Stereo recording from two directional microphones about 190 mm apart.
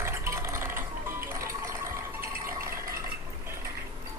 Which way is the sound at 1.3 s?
15° right (ahead or behind).